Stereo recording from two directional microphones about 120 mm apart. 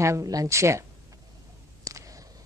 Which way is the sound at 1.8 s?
30° right (ahead or behind).